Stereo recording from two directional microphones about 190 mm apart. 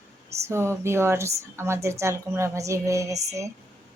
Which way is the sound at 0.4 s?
15° right (ahead or behind).